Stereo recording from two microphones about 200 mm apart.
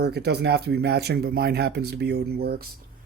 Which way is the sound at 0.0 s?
55° right (ahead or behind).